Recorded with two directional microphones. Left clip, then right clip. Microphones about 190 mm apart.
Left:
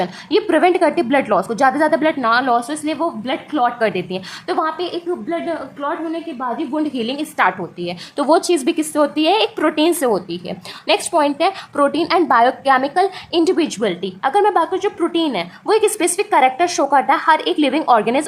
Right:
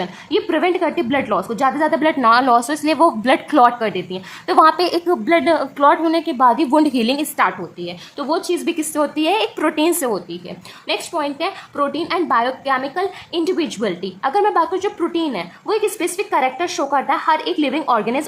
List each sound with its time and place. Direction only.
0.0 s a woman's voice: 10° left (ahead or behind); by 3.7 s 20° right (ahead or behind)
3.8 s a woman's voice: centre (ahead or behind)
5.2 s a woman's voice: 40° right (ahead or behind)
6.8 s a woman's voice: 15° right (ahead or behind)
7.8 s a woman's voice: 25° left (ahead or behind)
10.1 s a woman's voice: 20° left (ahead or behind)